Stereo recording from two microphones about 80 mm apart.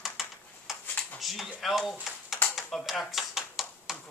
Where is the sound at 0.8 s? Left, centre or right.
Left.